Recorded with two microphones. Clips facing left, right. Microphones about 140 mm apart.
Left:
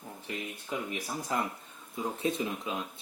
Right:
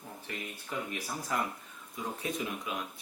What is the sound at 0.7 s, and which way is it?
Speech, 15° left (ahead or behind).